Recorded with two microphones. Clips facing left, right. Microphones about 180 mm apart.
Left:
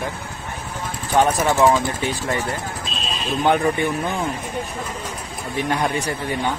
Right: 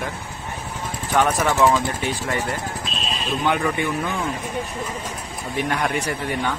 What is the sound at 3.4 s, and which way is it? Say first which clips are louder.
Speech: left 4 dB; 40° left (ahead or behind).